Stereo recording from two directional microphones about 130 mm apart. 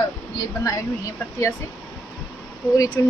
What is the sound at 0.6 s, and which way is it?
Speech, 25° left (ahead or behind).